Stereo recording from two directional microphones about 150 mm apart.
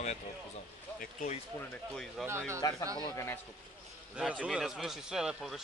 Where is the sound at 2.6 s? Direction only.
25° left (ahead or behind).